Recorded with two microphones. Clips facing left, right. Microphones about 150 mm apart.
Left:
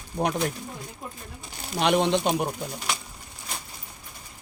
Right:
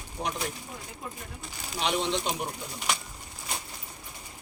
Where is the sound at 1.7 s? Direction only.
60° left (ahead or behind).